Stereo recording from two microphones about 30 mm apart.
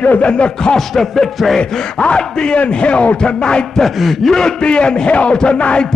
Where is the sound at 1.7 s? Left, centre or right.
Left.